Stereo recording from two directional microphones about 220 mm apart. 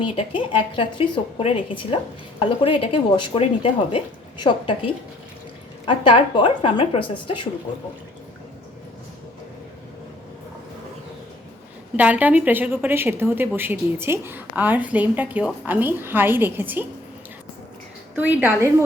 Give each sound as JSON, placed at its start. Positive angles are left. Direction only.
{"t": 0.0, "sound": "speech", "side_deg": 25}
{"t": 11.9, "sound": "a woman's voice", "side_deg": -5}
{"t": 18.2, "sound": "a woman's voice", "side_deg": -5}